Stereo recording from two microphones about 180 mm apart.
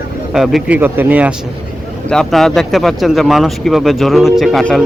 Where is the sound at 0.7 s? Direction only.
10° right (ahead or behind).